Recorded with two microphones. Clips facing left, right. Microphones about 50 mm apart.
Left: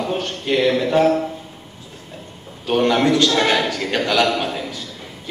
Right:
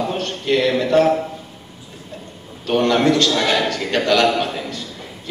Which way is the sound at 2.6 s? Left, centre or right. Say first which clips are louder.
Right 1 dB; centre.